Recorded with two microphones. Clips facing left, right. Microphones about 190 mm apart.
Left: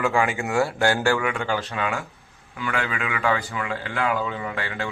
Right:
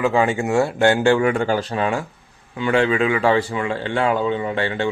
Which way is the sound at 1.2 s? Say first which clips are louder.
Right 7 dB; 40° right (ahead or behind).